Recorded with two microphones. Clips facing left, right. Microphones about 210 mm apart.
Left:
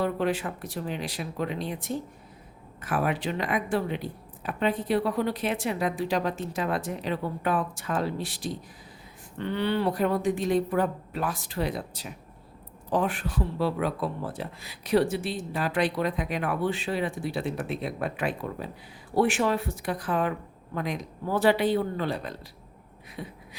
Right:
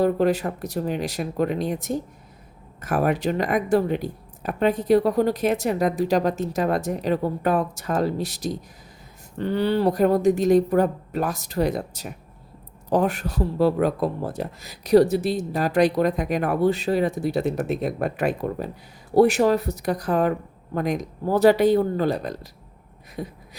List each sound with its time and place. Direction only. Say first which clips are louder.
0.0 s speech: right 7 dB; 40° right (ahead or behind)